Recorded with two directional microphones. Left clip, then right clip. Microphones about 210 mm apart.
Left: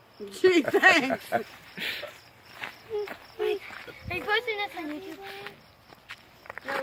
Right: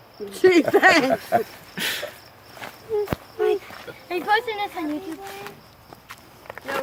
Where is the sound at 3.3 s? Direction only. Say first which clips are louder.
Right 7 dB; 40° left (ahead or behind).